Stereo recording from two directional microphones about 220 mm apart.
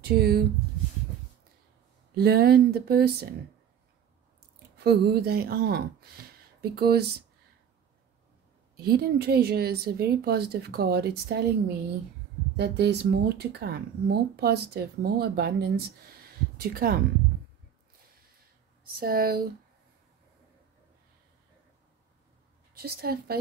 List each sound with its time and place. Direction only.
0.0 s speech: 45° right (ahead or behind)
2.1 s speech: 45° right (ahead or behind)
4.7 s speech: 45° right (ahead or behind)
8.7 s speech: 45° right (ahead or behind)
12.5 s speech: 50° right (ahead or behind)
18.9 s speech: 40° right (ahead or behind)
22.8 s speech: 45° right (ahead or behind)